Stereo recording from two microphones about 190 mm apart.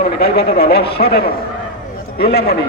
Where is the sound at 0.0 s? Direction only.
55° left (ahead or behind).